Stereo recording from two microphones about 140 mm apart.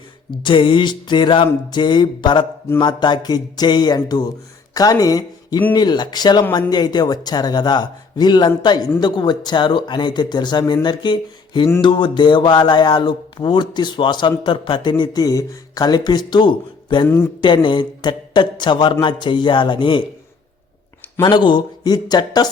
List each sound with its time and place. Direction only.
0.3 s speech: 35° left (ahead or behind)
21.2 s speech: 35° left (ahead or behind)